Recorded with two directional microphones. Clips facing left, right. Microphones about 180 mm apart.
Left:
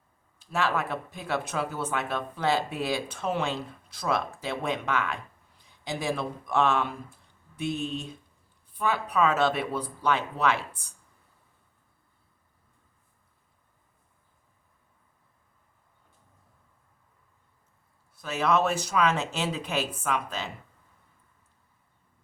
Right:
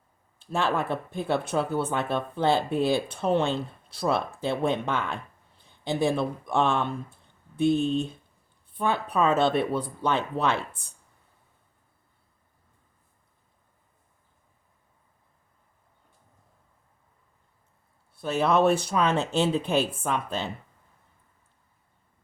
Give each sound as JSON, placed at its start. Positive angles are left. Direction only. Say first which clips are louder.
{"t": 0.3, "sound": "speech", "louder": "right 2 dB", "side_deg": -30}
{"t": 18.1, "sound": "speech", "louder": "right 2 dB", "side_deg": -30}